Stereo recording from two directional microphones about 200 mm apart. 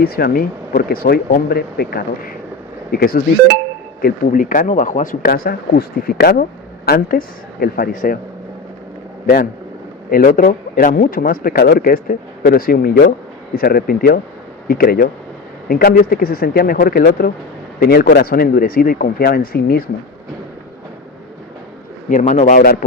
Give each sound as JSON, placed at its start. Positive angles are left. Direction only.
{"t": 0.0, "sound": "a man's voice", "side_deg": 45}
{"t": 9.2, "sound": "a man's voice", "side_deg": 45}
{"t": 22.1, "sound": "speech", "side_deg": 35}